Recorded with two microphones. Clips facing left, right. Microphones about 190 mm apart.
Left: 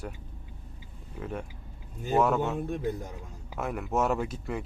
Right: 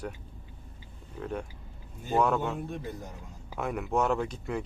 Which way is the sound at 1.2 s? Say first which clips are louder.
Right 1 dB; 5° left (ahead or behind).